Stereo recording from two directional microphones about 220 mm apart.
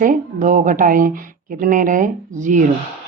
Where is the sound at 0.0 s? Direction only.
35° right (ahead or behind).